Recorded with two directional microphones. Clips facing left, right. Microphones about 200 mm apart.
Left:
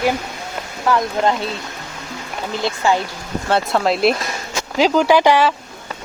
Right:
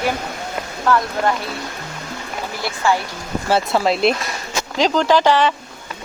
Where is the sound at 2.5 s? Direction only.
20° left (ahead or behind).